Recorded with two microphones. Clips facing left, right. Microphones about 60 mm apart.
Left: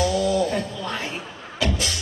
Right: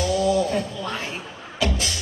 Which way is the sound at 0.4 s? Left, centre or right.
Left.